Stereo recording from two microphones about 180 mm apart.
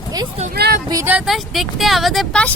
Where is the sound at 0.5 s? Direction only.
60° right (ahead or behind).